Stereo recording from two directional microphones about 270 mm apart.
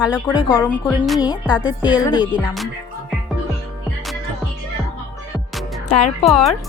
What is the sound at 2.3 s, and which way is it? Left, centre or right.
Speech, centre.